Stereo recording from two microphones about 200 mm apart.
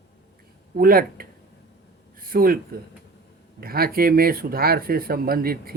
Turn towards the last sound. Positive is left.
turn(degrees=-50)  # may be behind; listen again after turning